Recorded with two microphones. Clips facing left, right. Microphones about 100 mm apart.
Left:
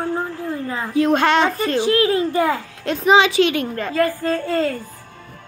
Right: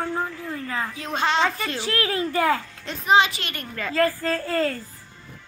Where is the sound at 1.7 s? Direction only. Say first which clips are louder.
Left 9 dB; 25° left (ahead or behind).